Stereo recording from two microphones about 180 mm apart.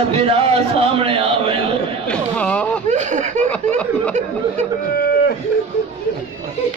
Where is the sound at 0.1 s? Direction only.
30° right (ahead or behind).